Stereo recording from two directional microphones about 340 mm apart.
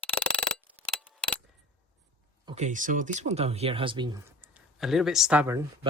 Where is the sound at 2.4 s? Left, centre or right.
Centre.